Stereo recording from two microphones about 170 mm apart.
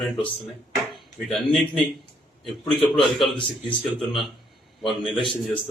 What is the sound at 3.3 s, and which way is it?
A man's voice, 30° left (ahead or behind).